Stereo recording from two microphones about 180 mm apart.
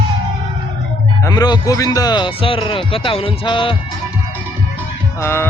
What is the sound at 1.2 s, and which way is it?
A man's voice, 25° left (ahead or behind).